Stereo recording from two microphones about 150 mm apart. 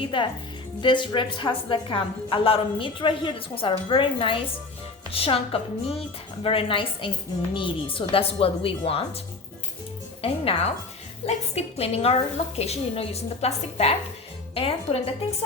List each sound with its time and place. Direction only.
0.0 s a woman's voice: 35° left (ahead or behind)
10.2 s a woman's voice: 40° left (ahead or behind)